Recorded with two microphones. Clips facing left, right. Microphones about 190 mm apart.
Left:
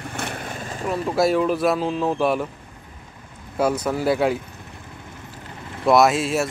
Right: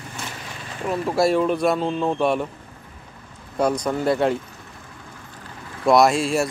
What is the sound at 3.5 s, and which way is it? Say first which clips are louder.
Speech: even; 5° left (ahead or behind).